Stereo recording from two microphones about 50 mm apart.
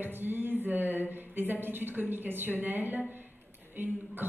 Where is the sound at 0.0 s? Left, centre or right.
Right.